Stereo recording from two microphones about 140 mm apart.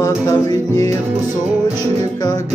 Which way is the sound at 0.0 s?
25° left (ahead or behind).